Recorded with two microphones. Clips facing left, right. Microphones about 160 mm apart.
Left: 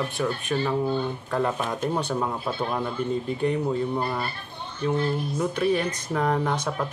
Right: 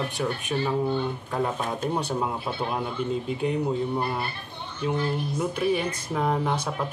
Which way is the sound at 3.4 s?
10° right (ahead or behind).